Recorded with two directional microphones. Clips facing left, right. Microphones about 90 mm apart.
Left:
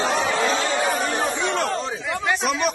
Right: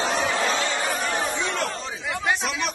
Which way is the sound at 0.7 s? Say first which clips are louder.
Left 4 dB; 45° left (ahead or behind).